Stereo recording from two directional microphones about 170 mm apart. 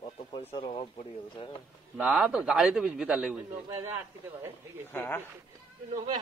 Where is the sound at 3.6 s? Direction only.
15° right (ahead or behind).